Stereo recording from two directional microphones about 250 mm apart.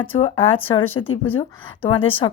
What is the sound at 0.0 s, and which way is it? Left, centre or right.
Speech, left.